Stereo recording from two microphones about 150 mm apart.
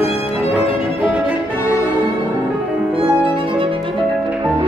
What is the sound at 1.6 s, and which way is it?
Music, 20° left (ahead or behind).